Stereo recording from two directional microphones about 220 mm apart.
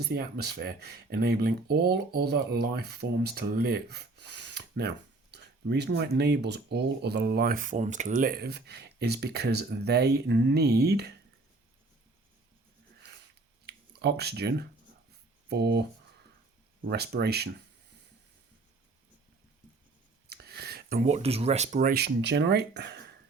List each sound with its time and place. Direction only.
0.0 s speech: 45° right (ahead or behind)
13.7 s speech: 45° right (ahead or behind)
20.3 s a sound: 45° right (ahead or behind)
21.1 s speech: 25° right (ahead or behind); by 23.1 s 50° right (ahead or behind)